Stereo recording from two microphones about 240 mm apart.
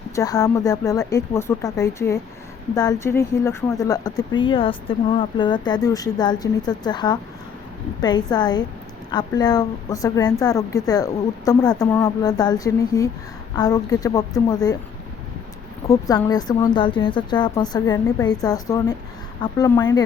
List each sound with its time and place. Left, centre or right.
0.2 s speech: centre
15.9 s speech: centre